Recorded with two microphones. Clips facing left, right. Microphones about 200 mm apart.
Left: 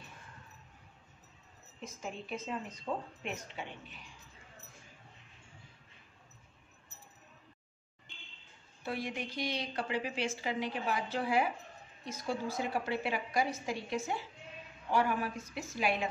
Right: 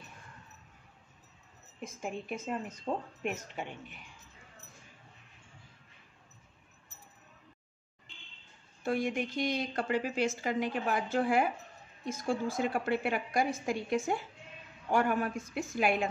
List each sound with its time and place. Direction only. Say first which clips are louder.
1.8 s a woman's voice: right 4 dB; 55° right (ahead or behind)
8.8 s a woman's voice: right 6 dB; 50° right (ahead or behind)